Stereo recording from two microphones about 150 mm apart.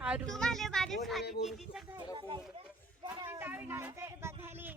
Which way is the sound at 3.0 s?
20° right (ahead or behind).